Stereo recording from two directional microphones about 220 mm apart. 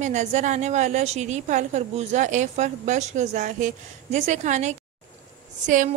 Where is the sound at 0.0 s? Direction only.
35° right (ahead or behind).